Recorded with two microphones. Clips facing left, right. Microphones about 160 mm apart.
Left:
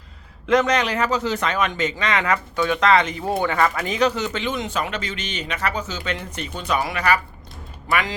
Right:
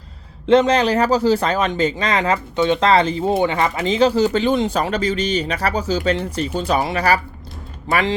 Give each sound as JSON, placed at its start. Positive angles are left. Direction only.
{"t": 0.4, "sound": "speech", "side_deg": -30}